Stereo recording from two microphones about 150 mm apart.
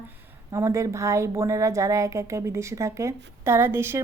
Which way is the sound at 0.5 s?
20° right (ahead or behind).